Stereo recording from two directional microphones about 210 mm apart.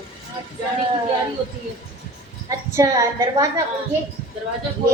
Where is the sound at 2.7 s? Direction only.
15° right (ahead or behind).